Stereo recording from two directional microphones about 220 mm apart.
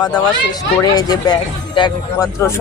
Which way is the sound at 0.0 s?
20° left (ahead or behind).